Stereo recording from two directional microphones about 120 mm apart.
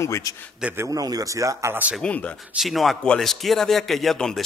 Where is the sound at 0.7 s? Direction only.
25° right (ahead or behind).